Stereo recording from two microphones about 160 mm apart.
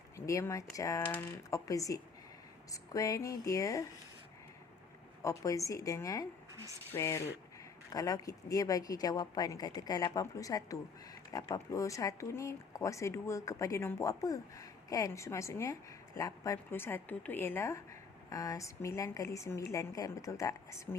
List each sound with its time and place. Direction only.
0.2 s speech: 15° left (ahead or behind)
2.7 s a sound: 20° left (ahead or behind)
3.2 s speech: 20° left (ahead or behind)
5.2 s speech: 20° left (ahead or behind)